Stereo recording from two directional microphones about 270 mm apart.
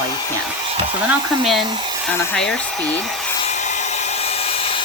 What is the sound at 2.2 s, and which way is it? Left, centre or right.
Speech, centre.